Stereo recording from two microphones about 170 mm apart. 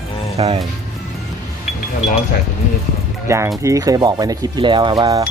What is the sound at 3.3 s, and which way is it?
Speech, 15° right (ahead or behind).